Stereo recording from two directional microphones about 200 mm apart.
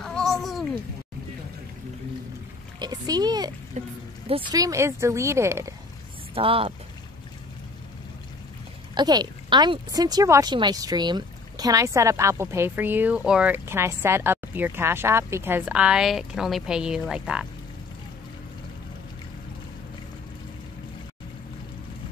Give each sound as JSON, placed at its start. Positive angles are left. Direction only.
{"t": 0.0, "sound": "a sound", "side_deg": 0}
{"t": 2.8, "sound": "speech", "side_deg": -20}
{"t": 3.8, "sound": "speech", "side_deg": -35}
{"t": 4.3, "sound": "speech", "side_deg": -25}
{"t": 6.3, "sound": "speech", "side_deg": -30}
{"t": 8.9, "sound": "speech", "side_deg": -20}